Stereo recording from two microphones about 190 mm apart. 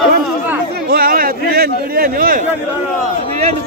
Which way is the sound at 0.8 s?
50° right (ahead or behind).